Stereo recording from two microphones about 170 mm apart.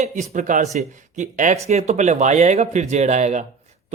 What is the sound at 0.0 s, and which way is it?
A man's voice, 45° right (ahead or behind).